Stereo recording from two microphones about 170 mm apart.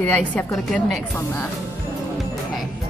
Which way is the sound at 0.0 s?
5° left (ahead or behind).